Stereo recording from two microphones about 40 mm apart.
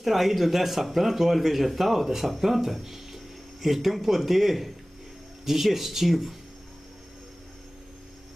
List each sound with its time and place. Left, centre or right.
0.0 s a man's voice: centre